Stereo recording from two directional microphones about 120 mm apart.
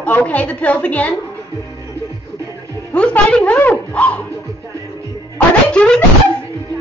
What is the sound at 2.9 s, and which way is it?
A woman's voice, 10° left (ahead or behind).